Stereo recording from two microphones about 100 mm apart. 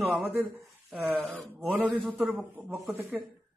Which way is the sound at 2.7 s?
20° right (ahead or behind).